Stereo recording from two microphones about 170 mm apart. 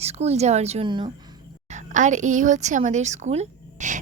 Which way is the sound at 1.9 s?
45° right (ahead or behind).